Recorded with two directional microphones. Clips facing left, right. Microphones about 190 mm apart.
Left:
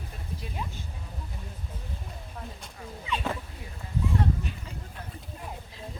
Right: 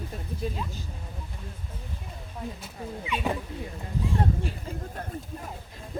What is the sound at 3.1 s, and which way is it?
Speech, 15° right (ahead or behind).